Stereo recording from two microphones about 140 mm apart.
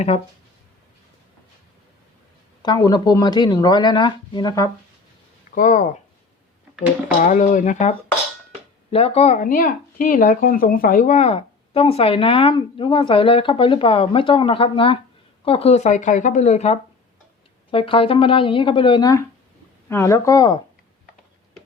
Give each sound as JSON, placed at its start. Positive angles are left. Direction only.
{"t": 2.6, "sound": "speech", "side_deg": 30}
{"t": 5.5, "sound": "speech", "side_deg": 65}
{"t": 7.2, "sound": "speech", "side_deg": 65}
{"t": 8.9, "sound": "speech", "side_deg": 45}
{"t": 9.4, "sound": "speech", "side_deg": 85}
{"t": 17.7, "sound": "speech", "side_deg": 40}